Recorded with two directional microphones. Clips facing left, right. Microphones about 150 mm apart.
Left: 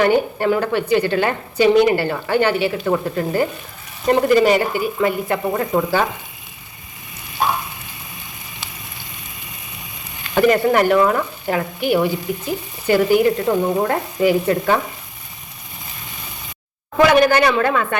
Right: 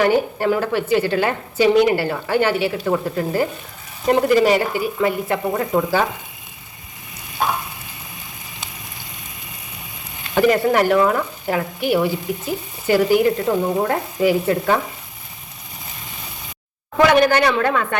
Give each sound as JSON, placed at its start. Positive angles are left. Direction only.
{"t": 0.0, "sound": "a woman's voice", "side_deg": -5}
{"t": 10.3, "sound": "a woman's voice", "side_deg": 0}
{"t": 17.0, "sound": "a woman's voice", "side_deg": 5}